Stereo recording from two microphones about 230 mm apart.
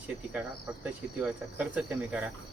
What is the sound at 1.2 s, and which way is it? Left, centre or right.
Speech, centre.